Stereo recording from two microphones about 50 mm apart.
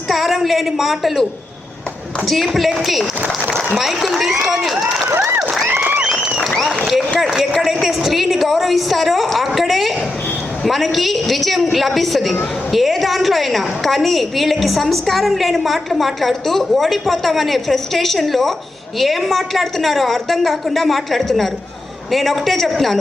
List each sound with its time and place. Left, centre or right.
0.1 s a woman's voice: centre
5.6 s a sound: right
7.2 s a woman's voice: centre